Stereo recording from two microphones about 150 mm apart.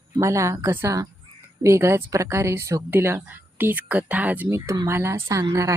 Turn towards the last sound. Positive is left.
turn(degrees=-20)  # may be behind; listen again after turning